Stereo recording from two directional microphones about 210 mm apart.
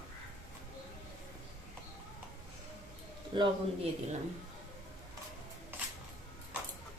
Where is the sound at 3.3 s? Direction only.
20° right (ahead or behind).